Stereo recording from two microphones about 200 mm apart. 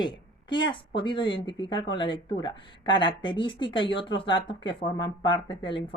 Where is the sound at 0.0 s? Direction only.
25° left (ahead or behind).